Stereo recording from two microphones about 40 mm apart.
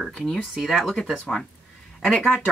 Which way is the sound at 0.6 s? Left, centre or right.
Centre.